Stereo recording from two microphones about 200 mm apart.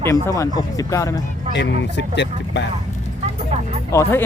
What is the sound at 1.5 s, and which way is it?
Speech, 60° left (ahead or behind).